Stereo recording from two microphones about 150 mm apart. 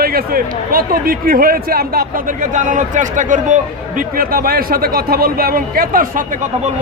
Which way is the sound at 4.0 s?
70° right (ahead or behind).